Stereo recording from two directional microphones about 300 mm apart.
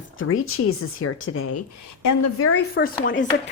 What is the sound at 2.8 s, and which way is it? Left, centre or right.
Speech, left.